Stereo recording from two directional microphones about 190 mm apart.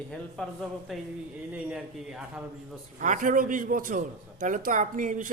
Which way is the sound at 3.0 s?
45° right (ahead or behind).